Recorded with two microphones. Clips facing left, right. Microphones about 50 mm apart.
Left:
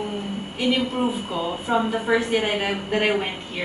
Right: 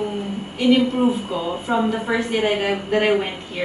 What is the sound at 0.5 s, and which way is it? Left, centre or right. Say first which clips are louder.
A woman's voice: right 6 dB; centre.